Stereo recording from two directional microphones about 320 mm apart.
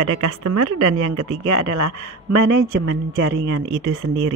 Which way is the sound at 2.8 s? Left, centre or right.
Right.